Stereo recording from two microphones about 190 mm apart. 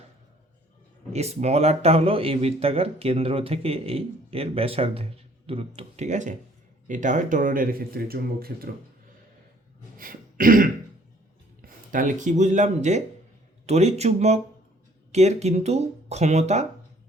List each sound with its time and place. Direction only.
1.1 s speech: 35° right (ahead or behind); by 8.7 s 50° right (ahead or behind)
10.0 s throat clearing: 50° right (ahead or behind)
11.6 s speech: 45° right (ahead or behind)